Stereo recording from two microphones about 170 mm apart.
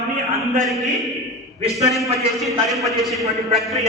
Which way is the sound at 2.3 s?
Centre (ahead or behind).